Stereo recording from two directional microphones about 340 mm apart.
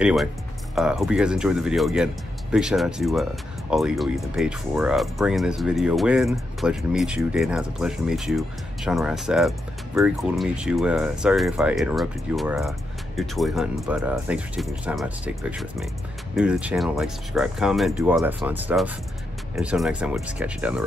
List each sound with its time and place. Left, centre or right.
0.0 s speech: centre